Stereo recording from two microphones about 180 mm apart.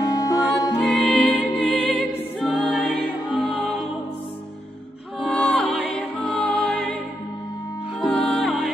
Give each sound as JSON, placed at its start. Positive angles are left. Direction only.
{"t": 0.0, "sound": "music", "side_deg": 20}
{"t": 0.7, "sound": "music", "side_deg": 0}
{"t": 5.2, "sound": "music", "side_deg": 0}
{"t": 8.0, "sound": "music", "side_deg": 5}